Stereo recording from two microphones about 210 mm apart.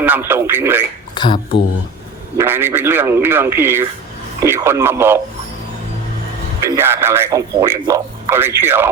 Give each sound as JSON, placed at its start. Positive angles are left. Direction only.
{"t": 0.0, "sound": "speech", "side_deg": -10}
{"t": 1.1, "sound": "speech", "side_deg": 20}
{"t": 2.4, "sound": "speech", "side_deg": -10}
{"t": 6.7, "sound": "speech", "side_deg": -10}